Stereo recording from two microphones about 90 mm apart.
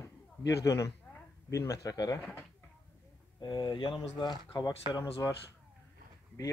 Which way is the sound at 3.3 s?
55° left (ahead or behind).